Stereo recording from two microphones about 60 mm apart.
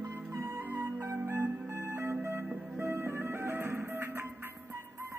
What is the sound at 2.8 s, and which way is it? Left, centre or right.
Music, right.